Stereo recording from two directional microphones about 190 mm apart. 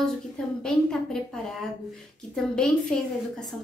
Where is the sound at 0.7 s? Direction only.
5° left (ahead or behind).